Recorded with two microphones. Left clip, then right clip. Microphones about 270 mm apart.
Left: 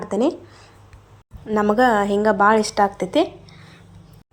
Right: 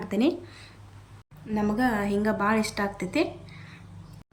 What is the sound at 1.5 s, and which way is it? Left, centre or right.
Speech, left.